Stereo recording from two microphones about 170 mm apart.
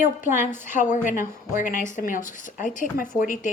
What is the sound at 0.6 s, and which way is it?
Speech, 45° left (ahead or behind).